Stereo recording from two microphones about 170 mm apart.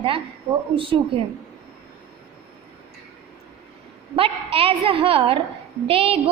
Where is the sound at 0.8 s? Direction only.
30° right (ahead or behind).